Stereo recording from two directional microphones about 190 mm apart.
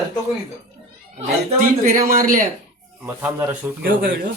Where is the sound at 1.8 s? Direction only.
50° right (ahead or behind).